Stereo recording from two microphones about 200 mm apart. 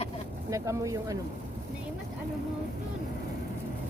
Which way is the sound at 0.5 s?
15° right (ahead or behind).